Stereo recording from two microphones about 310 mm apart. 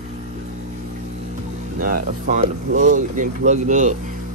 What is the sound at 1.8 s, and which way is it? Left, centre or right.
Speech, right.